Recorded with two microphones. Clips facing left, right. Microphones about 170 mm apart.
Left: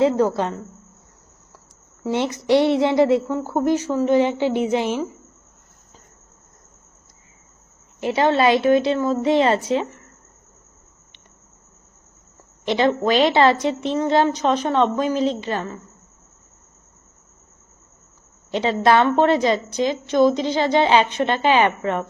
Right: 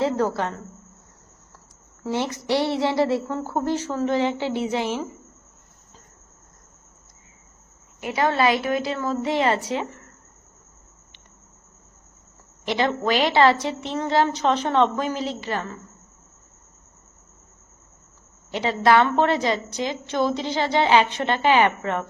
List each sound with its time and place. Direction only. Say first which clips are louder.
0.0 s a woman's voice: left 5 dB; 20° left (ahead or behind)
2.0 s a woman's voice: left 5 dB; 20° left (ahead or behind)
8.0 s a woman's voice: left 4 dB; 25° left (ahead or behind)
12.6 s a woman's voice: left 4 dB; 20° left (ahead or behind)
18.5 s a woman's voice: left 2 dB; 25° left (ahead or behind)